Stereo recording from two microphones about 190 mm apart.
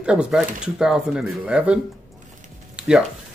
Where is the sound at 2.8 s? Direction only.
5° right (ahead or behind).